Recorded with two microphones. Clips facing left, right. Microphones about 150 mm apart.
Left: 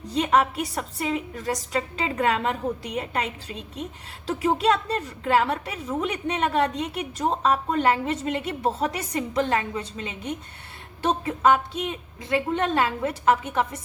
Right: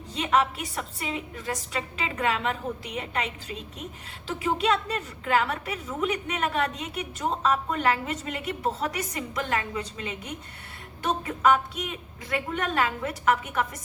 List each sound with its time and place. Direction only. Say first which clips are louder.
0.1 s a woman's voice: left 3 dB; 35° left (ahead or behind)
4.3 s a woman's voice: left 4 dB; 40° left (ahead or behind)